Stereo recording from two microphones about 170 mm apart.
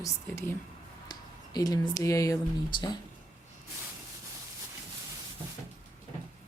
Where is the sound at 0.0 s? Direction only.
15° left (ahead or behind).